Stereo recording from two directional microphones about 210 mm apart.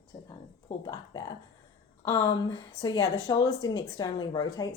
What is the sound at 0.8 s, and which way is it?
Speech, 20° left (ahead or behind).